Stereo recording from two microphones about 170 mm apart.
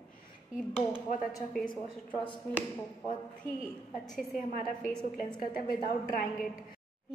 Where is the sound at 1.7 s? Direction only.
30° left (ahead or behind).